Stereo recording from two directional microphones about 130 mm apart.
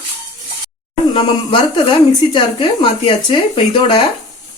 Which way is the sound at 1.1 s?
45° left (ahead or behind).